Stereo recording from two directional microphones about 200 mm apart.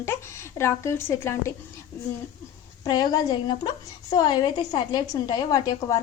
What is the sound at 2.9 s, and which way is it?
A woman's voice, 20° left (ahead or behind).